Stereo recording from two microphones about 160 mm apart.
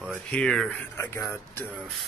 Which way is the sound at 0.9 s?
15° left (ahead or behind).